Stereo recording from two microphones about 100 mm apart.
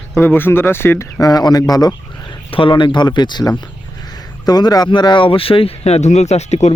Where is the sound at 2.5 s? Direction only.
55° left (ahead or behind).